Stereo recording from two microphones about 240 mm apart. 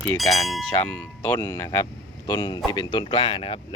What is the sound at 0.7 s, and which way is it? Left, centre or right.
Speech, centre.